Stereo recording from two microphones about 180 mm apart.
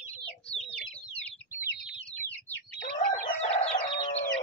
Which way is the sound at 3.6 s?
30° left (ahead or behind).